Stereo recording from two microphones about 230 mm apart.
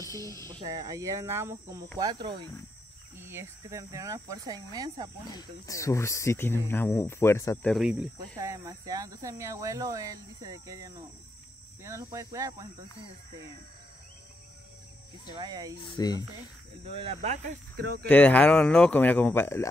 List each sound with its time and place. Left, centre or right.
0.0 s speech: centre
0.5 s speech: centre
5.3 s speech: centre
7.7 s speech: centre
15.3 s speech: centre
15.8 s speech: centre
16.8 s speech: right
17.7 s speech: right
18.0 s speech: centre